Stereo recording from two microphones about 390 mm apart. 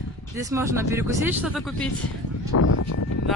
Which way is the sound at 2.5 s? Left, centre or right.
Left.